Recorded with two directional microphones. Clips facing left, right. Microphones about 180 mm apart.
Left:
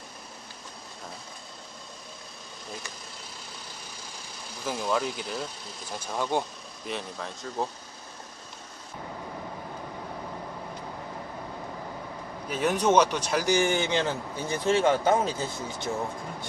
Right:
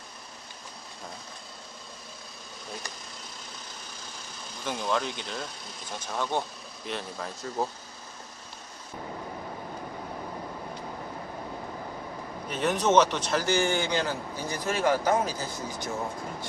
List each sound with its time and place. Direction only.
4.6 s speech: 5° left (ahead or behind)
12.5 s a man's voice: 10° left (ahead or behind); by 15.9 s 25° left (ahead or behind)